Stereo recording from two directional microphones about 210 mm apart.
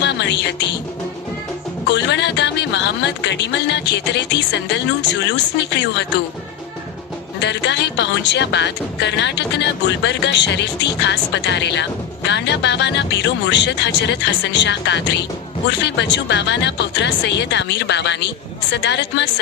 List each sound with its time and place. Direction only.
0.0 s music: 55° left (ahead or behind)
1.9 s speech: 55° left (ahead or behind)
7.4 s speech: 55° left (ahead or behind)